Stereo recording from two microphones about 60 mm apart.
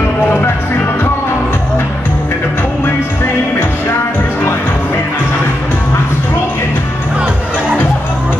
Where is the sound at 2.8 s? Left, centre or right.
Left.